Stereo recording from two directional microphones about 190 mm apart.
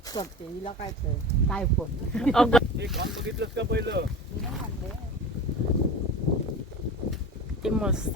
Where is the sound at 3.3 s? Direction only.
65° right (ahead or behind).